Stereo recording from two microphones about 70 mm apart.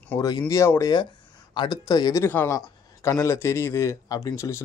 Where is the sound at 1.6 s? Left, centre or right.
Left.